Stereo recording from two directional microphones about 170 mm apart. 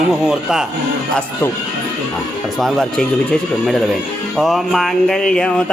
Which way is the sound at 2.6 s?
5° left (ahead or behind).